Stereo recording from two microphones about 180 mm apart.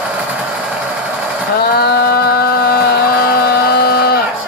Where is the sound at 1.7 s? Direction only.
60° left (ahead or behind).